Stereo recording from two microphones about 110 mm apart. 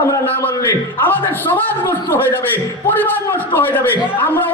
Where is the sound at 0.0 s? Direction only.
20° left (ahead or behind).